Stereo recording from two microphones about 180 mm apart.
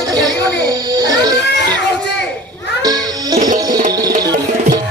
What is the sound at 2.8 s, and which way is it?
Music, 20° right (ahead or behind).